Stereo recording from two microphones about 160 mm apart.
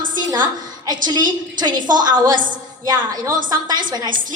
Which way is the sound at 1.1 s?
25° right (ahead or behind).